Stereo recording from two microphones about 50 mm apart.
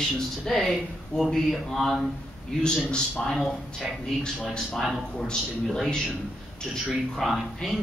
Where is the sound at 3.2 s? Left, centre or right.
Centre.